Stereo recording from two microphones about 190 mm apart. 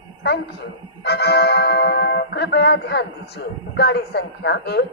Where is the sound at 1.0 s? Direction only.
55° left (ahead or behind).